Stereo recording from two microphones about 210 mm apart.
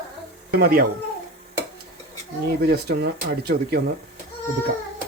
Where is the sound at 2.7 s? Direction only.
50° right (ahead or behind).